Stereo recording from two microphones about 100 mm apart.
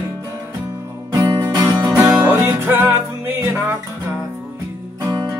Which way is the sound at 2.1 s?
35° right (ahead or behind).